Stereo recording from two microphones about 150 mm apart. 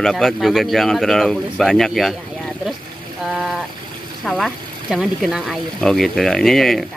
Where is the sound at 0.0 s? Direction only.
Centre (ahead or behind).